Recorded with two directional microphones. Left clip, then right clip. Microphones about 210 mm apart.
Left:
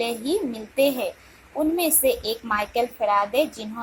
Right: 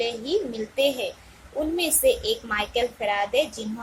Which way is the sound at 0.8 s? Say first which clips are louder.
Left 2 dB; 15° left (ahead or behind).